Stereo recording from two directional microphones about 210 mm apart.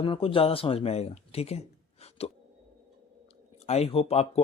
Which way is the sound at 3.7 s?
30° left (ahead or behind).